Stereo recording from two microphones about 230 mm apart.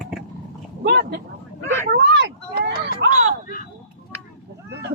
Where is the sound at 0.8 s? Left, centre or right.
Right.